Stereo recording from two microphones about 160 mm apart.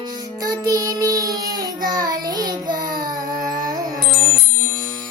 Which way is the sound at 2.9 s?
60° right (ahead or behind).